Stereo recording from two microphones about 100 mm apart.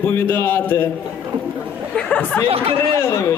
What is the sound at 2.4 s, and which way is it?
Speech, 70° right (ahead or behind).